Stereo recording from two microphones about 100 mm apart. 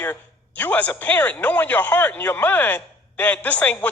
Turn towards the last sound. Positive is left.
turn(degrees=15)  # may be behind; listen again after turning